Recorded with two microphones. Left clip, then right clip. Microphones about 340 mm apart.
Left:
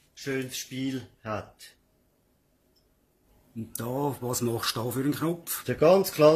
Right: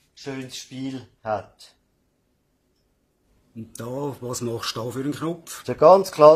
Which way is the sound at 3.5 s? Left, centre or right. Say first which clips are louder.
Right 1 dB; centre.